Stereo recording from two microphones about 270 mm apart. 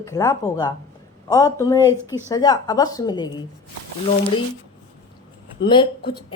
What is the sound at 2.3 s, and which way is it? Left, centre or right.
Speech, centre.